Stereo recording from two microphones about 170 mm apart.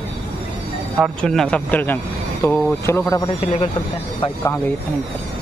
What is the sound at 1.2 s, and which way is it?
Speech, 5° left (ahead or behind).